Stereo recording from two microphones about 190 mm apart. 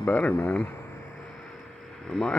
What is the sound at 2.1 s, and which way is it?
Speech, centre (ahead or behind).